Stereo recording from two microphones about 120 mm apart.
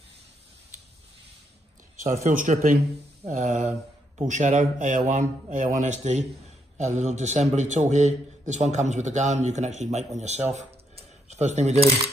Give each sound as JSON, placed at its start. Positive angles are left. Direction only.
{"t": 2.2, "sound": "a man's voice", "side_deg": -90}
{"t": 6.8, "sound": "a man's voice", "side_deg": -70}